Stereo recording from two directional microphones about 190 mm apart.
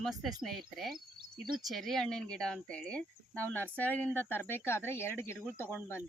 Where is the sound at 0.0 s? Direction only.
Centre (ahead or behind).